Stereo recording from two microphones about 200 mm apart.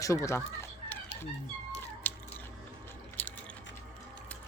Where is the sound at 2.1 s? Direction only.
10° left (ahead or behind).